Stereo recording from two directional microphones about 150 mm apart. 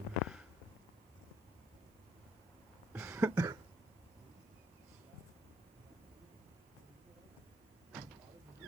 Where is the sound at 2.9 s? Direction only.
20° right (ahead or behind).